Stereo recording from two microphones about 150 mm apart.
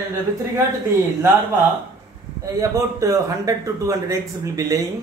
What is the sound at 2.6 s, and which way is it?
Speech, 20° right (ahead or behind).